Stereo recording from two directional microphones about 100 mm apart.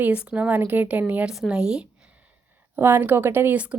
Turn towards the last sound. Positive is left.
turn(degrees=-15)  # may be behind; listen again after turning